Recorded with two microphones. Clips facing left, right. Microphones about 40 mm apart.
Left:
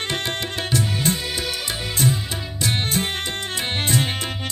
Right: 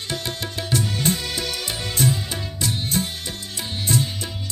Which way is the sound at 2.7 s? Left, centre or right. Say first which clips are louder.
Left 4 dB; left.